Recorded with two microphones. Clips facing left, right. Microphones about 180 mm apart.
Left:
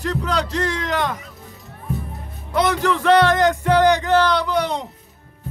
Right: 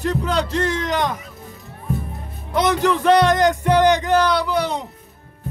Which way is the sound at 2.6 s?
20° right (ahead or behind).